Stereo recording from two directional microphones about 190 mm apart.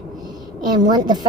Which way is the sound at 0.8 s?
20° right (ahead or behind).